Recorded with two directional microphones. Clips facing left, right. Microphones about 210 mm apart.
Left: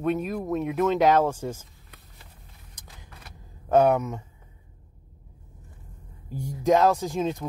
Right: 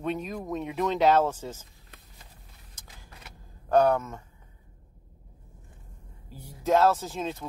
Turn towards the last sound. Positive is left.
turn(degrees=15)  # may be behind; listen again after turning